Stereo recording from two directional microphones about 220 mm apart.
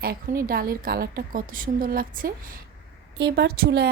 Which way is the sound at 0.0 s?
40° right (ahead or behind).